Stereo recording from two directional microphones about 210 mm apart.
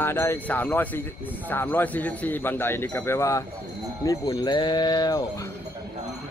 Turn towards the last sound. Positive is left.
turn(degrees=20)  # may be behind; listen again after turning